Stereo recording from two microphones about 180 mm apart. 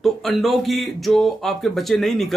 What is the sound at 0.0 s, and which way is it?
Speech, centre (ahead or behind).